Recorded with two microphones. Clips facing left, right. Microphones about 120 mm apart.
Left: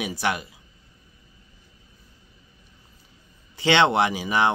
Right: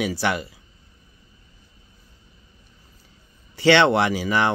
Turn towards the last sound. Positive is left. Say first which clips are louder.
# right 1 dB
turn(degrees=15)  # may be behind; listen again after turning